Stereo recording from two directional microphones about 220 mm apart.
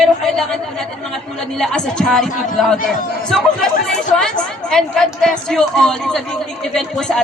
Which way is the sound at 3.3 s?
Centre (ahead or behind).